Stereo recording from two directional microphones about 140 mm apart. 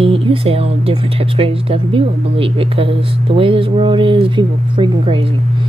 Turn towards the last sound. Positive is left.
turn(degrees=-35)  # may be behind; listen again after turning